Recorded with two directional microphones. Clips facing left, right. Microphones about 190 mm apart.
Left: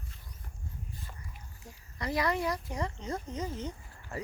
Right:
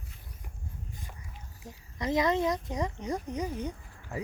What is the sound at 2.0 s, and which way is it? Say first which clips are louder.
Speech: right 4 dB; 20° right (ahead or behind).